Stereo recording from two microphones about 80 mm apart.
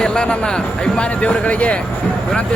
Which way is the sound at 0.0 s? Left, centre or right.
Centre.